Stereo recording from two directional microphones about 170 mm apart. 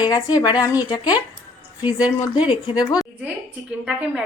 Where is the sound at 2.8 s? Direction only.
20° left (ahead or behind).